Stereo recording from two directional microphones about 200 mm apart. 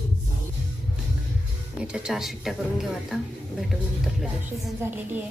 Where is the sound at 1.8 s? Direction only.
5° right (ahead or behind).